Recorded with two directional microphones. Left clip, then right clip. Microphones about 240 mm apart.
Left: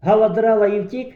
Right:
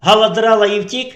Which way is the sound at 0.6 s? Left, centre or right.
Right.